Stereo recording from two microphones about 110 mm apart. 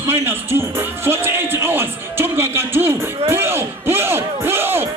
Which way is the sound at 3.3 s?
20° right (ahead or behind).